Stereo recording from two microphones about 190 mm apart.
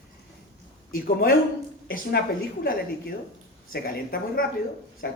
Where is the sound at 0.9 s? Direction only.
50° left (ahead or behind).